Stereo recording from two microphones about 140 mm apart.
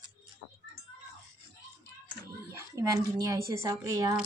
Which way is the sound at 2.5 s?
20° right (ahead or behind).